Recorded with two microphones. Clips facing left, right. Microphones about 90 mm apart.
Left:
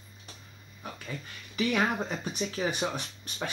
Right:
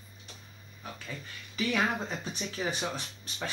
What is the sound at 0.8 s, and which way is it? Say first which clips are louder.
Speech: left 2 dB; 15° left (ahead or behind).